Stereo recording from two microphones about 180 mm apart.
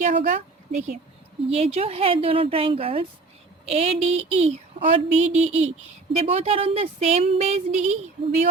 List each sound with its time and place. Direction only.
0.0 s a woman's voice: 45° right (ahead or behind)